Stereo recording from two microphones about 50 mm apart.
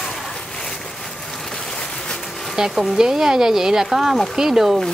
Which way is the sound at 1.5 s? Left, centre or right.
Centre.